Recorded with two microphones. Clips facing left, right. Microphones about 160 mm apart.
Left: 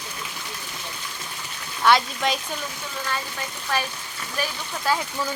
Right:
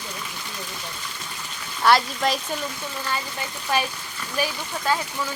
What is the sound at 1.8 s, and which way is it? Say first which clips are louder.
Speech: right 1 dB; centre (ahead or behind).